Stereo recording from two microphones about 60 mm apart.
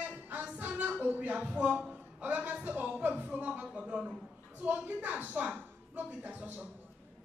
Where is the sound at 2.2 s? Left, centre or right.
Right.